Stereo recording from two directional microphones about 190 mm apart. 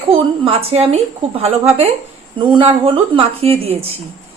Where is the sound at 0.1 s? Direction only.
30° right (ahead or behind).